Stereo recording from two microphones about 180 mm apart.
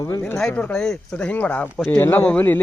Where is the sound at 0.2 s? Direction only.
5° left (ahead or behind).